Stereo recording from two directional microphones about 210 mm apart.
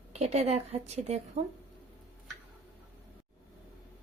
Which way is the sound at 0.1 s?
30° right (ahead or behind).